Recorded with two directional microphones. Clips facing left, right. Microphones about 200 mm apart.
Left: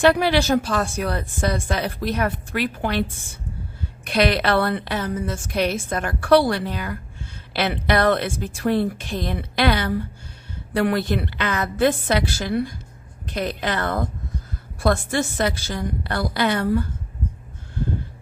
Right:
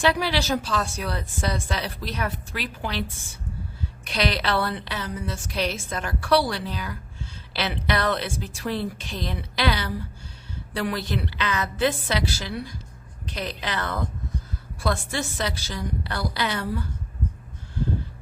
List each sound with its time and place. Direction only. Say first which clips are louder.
0.0 s a woman's voice: left 6 dB; 55° left (ahead or behind)